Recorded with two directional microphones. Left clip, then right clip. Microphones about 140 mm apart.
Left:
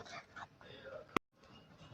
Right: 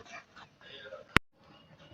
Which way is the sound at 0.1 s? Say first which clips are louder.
Right 3 dB; 25° left (ahead or behind).